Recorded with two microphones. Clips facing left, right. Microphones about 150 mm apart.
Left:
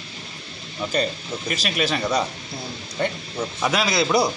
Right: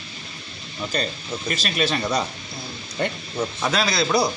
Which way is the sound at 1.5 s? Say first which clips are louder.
Even; 10° left (ahead or behind).